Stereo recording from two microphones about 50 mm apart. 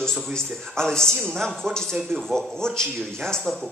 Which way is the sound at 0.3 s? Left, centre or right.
Centre.